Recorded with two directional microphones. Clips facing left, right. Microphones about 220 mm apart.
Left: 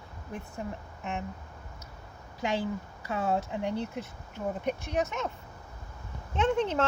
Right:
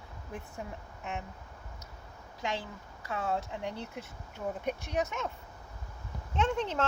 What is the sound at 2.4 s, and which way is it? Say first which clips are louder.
Speech: left 6 dB; 5° left (ahead or behind).